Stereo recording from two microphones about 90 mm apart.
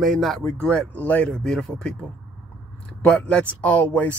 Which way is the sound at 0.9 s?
15° left (ahead or behind).